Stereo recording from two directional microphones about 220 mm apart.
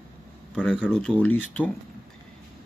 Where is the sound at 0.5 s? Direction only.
5° left (ahead or behind).